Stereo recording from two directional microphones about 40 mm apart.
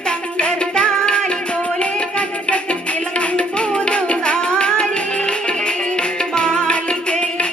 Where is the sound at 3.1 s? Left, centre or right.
Left.